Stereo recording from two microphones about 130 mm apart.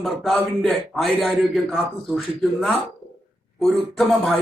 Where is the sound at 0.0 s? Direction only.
Centre (ahead or behind).